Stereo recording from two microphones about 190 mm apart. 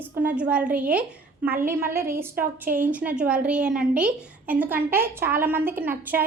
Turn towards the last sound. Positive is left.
turn(degrees=-10)  # may be behind; listen again after turning